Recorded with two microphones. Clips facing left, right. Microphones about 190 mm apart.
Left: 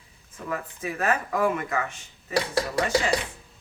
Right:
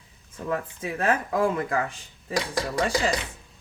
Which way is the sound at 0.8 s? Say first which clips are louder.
Even; 30° right (ahead or behind).